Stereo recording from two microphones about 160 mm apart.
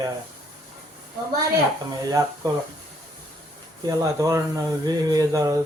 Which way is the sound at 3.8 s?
20° right (ahead or behind).